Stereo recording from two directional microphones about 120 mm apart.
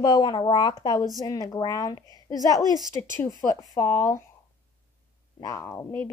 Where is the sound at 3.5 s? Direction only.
25° left (ahead or behind).